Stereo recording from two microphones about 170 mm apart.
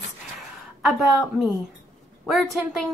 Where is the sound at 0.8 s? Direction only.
Centre (ahead or behind).